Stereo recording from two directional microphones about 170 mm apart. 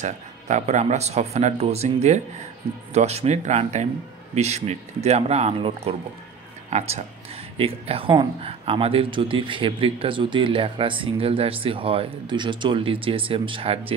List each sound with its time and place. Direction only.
0.0 s speech: 45° right (ahead or behind)